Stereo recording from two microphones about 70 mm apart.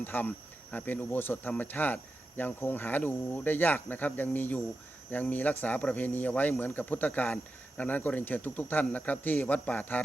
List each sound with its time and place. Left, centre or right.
0.0 s speech: left